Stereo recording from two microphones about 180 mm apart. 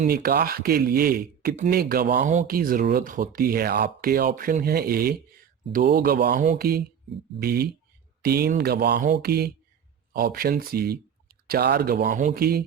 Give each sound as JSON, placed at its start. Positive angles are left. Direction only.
{"t": 0.1, "sound": "speech", "side_deg": -55}